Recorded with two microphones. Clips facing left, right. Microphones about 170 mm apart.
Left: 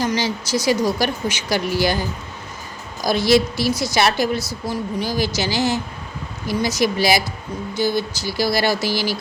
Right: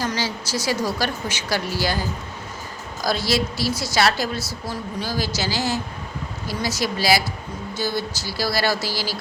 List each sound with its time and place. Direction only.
0.0 s a woman's voice: 15° left (ahead or behind)